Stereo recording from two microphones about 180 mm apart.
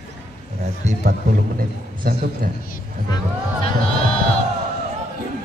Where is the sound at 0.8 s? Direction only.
50° right (ahead or behind).